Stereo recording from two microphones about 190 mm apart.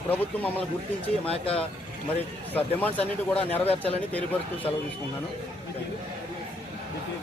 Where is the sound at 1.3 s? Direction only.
30° left (ahead or behind).